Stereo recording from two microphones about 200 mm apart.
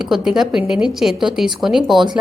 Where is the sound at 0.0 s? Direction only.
Centre (ahead or behind).